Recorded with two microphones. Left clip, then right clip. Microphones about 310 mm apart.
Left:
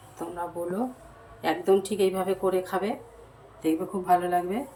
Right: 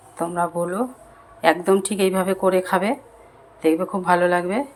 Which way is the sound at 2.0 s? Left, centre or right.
Right.